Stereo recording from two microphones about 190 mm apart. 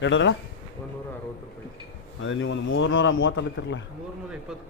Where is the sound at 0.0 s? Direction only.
75° left (ahead or behind).